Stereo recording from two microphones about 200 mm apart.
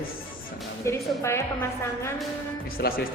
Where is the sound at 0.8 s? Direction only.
15° left (ahead or behind).